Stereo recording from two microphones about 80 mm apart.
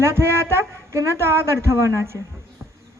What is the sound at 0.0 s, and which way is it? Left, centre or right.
A woman's voice, right.